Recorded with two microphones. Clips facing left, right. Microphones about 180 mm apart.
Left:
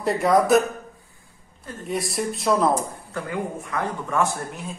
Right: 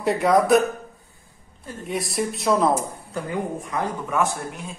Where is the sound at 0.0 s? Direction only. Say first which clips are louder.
Even; centre (ahead or behind).